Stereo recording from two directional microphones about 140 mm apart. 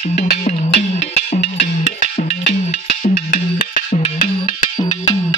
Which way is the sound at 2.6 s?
55° left (ahead or behind).